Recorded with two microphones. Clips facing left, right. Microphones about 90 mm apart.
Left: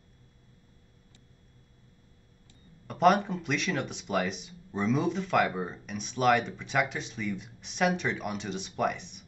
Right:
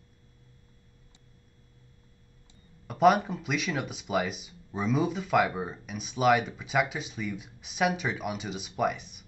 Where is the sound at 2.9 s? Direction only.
5° right (ahead or behind).